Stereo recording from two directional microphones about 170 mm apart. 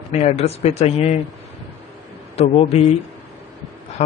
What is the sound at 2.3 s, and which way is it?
Speech, 35° left (ahead or behind).